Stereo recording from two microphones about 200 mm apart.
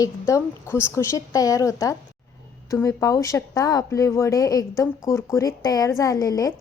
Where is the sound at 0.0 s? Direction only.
15° left (ahead or behind).